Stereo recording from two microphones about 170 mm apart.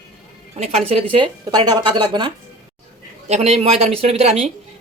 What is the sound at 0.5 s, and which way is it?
Speech, 40° right (ahead or behind).